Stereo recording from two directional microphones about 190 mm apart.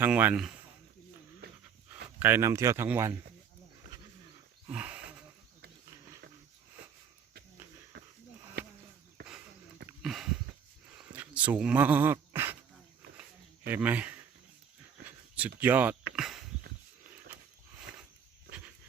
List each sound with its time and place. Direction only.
0.0 s speech: 10° right (ahead or behind)
1.4 s pant: 55° right (ahead or behind)
2.0 s speech: 10° right (ahead or behind)
4.7 s wild animals: 5° right (ahead or behind)
10.0 s a sound: centre (ahead or behind)
13.7 s speech: 10° right (ahead or behind)
15.4 s speech: 10° right (ahead or behind)
16.1 s a sound: centre (ahead or behind)